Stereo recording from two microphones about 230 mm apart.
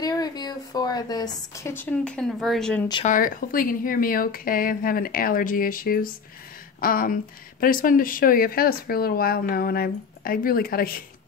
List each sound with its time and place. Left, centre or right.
0.0 s a woman's voice: centre
3.1 s speech: left